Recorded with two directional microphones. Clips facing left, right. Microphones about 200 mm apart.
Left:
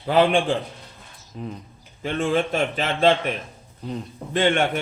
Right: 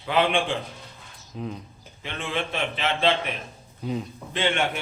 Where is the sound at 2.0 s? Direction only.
45° left (ahead or behind).